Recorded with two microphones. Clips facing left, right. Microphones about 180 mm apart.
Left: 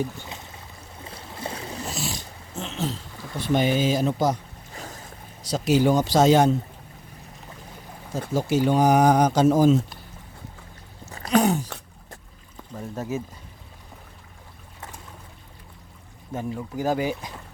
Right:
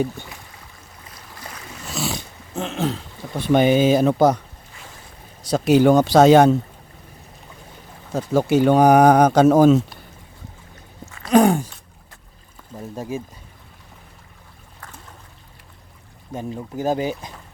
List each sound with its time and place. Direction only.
1.0 s a sound: 25° left (ahead or behind)
1.9 s dog: 65° right (ahead or behind)
3.4 s speech: 60° right (ahead or behind)
4.7 s boat: 40° left (ahead or behind)
5.4 s speech: 55° right (ahead or behind)
8.3 s speech: 60° right (ahead or behind)
11.3 s a sound: 50° right (ahead or behind)
16.3 s speech: 20° right (ahead or behind)